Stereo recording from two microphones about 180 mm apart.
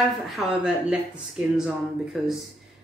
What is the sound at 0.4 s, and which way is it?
A woman's voice, 5° right (ahead or behind).